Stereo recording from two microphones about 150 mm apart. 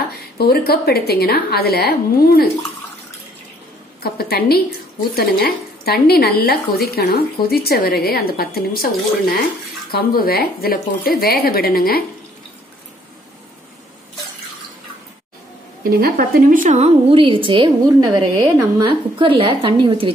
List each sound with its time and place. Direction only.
0.4 s a woman's voice: 90° left
4.0 s a woman's voice: 90° left
15.8 s a woman's voice: 80° right; by 16.9 s 55° right (ahead or behind)
17.1 s a woman's voice: 35° right (ahead or behind)